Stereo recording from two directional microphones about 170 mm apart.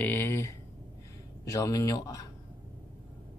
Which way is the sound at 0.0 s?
10° left (ahead or behind).